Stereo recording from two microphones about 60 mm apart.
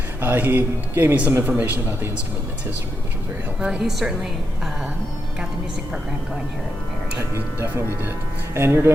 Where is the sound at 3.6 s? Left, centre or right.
Centre.